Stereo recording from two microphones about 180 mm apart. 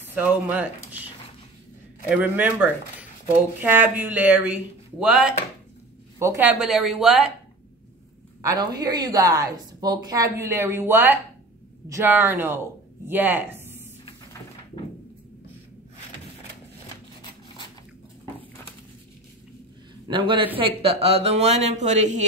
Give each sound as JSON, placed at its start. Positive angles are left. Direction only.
{"t": 0.0, "sound": "speech", "side_deg": -10}
{"t": 2.0, "sound": "speech", "side_deg": -10}
{"t": 8.4, "sound": "a woman's voice", "side_deg": -20}
{"t": 20.1, "sound": "a woman's voice", "side_deg": -30}